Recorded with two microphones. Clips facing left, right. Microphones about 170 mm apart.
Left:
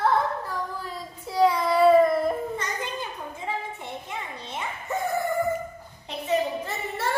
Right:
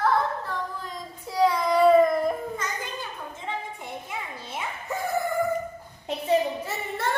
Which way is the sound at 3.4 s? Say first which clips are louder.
Left 2 dB; centre (ahead or behind).